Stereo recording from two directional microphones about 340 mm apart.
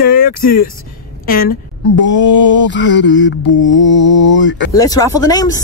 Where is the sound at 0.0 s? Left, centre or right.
Left.